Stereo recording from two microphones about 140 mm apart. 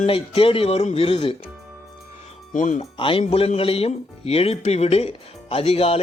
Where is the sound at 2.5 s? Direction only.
60° left (ahead or behind).